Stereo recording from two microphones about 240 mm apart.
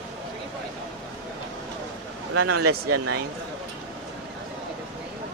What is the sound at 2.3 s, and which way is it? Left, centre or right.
Speech, right.